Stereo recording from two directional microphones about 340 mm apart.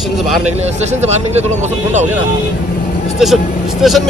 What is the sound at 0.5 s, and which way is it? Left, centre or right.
Speech, centre.